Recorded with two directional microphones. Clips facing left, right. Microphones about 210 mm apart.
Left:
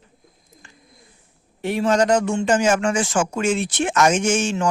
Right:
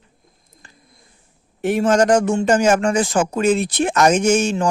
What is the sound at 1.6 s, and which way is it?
A man's voice, 45° right (ahead or behind).